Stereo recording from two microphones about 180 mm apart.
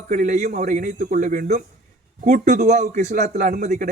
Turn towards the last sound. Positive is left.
turn(degrees=-40)  # may be behind; listen again after turning